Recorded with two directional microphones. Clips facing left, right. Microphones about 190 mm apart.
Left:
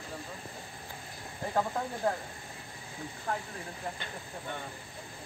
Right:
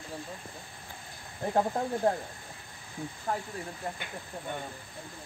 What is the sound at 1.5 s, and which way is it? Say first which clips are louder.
Speech: right 4 dB; 30° right (ahead or behind).